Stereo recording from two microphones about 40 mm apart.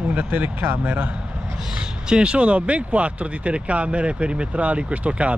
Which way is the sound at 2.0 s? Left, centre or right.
Right.